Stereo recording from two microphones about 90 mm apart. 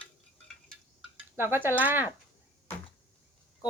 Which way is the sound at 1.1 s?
25° right (ahead or behind).